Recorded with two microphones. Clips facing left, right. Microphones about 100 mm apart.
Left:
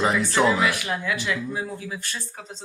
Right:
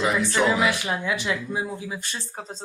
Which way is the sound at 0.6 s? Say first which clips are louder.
Right 1 dB; 25° right (ahead or behind).